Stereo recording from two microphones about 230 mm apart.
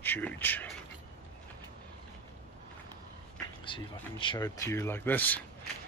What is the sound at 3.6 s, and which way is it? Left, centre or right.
Speech, left.